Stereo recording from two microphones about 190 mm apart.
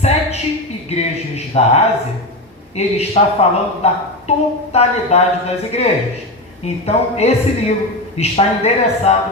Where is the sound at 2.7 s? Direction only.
35° left (ahead or behind).